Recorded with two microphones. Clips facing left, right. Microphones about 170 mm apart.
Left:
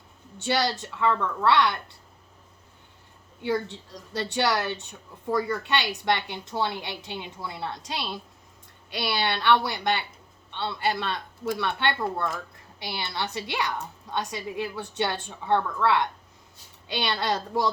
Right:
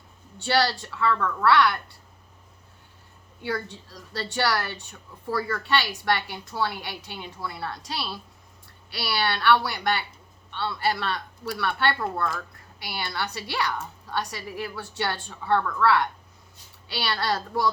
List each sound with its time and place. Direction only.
0.3 s a woman's voice: 20° left (ahead or behind)
3.4 s a woman's voice: 20° left (ahead or behind)